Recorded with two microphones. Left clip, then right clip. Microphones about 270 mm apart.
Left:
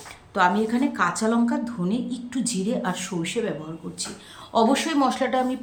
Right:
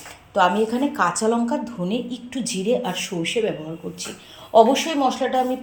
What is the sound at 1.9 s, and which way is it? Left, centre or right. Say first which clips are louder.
A woman's voice: right 2 dB; centre.